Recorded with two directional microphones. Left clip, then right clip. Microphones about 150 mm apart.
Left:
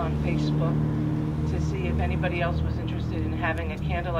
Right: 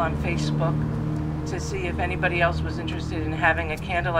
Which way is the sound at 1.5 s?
35° right (ahead or behind).